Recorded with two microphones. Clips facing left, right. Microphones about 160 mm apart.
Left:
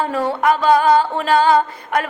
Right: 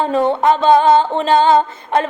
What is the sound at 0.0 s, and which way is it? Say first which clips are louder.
Music: right 4 dB; 25° right (ahead or behind).